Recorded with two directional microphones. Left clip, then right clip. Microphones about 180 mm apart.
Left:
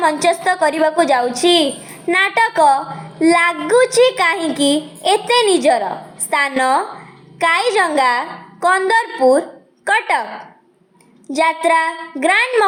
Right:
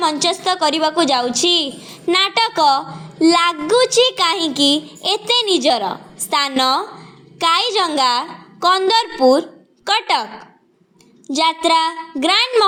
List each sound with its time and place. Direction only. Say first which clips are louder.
0.0 s a woman's voice: left 3 dB; 30° right (ahead or behind)
11.3 s a woman's voice: left 1 dB; 30° right (ahead or behind)